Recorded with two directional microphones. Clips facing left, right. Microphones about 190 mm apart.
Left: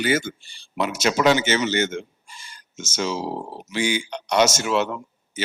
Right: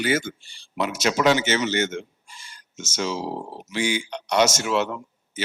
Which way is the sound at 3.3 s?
35° left (ahead or behind).